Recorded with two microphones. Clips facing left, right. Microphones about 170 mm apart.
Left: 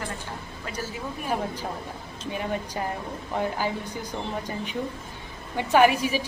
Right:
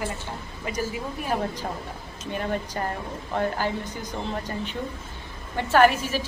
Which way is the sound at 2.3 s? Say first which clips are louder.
Right 2 dB; 5° left (ahead or behind).